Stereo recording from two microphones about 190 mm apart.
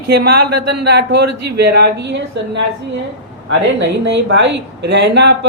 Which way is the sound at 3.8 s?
70° right (ahead or behind).